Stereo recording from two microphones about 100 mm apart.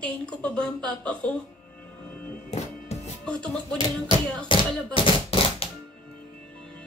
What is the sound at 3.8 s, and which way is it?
Music, 50° left (ahead or behind).